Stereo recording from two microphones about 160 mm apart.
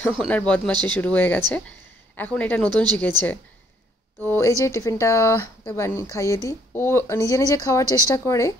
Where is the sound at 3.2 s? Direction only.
25° right (ahead or behind).